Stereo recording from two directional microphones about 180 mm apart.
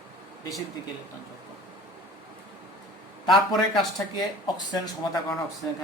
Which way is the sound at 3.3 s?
25° left (ahead or behind).